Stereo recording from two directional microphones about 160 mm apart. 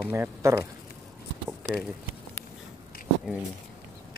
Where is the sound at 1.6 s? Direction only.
5° left (ahead or behind).